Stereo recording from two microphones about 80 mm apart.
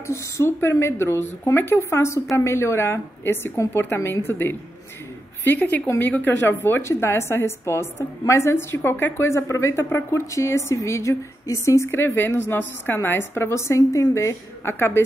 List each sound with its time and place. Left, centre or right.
0.0 s a woman's voice: left